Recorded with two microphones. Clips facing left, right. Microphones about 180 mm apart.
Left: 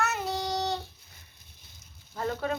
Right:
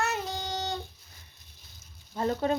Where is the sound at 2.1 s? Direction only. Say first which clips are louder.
Right 3 dB; 25° right (ahead or behind).